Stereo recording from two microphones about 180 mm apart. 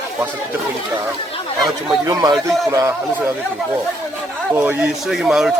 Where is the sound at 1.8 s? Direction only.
20° right (ahead or behind).